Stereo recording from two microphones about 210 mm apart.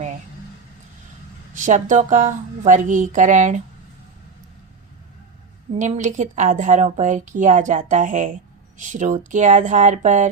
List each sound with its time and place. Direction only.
1.5 s a woman's voice: 35° right (ahead or behind)
5.7 s a woman's voice: 35° right (ahead or behind)